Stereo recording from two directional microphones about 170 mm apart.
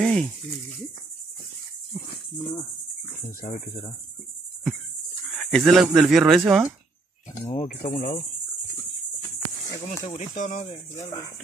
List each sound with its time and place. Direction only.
0.0 s speech: 5° left (ahead or behind)
3.3 s cricket: 50° left (ahead or behind)
5.3 s cricket: centre (ahead or behind)
5.7 s speech: centre (ahead or behind)
7.6 s speech: 55° left (ahead or behind)
10.0 s speech: 45° left (ahead or behind)